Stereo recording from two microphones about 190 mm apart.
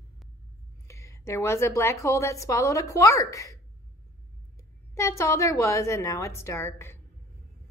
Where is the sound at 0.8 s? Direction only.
15° left (ahead or behind).